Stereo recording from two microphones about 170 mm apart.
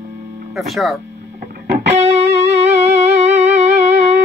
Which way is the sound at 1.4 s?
60° right (ahead or behind).